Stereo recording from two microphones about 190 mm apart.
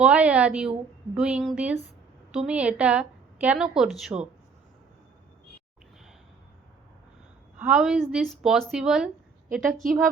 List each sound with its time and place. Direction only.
0.0 s a woman's voice: 5° right (ahead or behind)
7.6 s a woman's voice: 5° right (ahead or behind)